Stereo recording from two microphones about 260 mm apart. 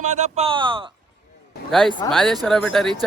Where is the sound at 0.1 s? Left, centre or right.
Right.